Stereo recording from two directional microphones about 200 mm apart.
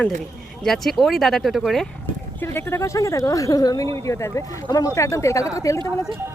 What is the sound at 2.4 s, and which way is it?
Speech, 10° left (ahead or behind).